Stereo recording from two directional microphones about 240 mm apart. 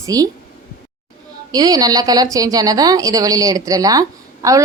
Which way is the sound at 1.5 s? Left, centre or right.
Centre.